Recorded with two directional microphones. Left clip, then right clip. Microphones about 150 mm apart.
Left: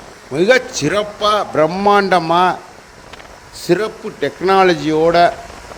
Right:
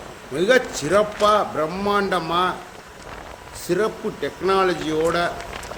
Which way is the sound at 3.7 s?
50° left (ahead or behind).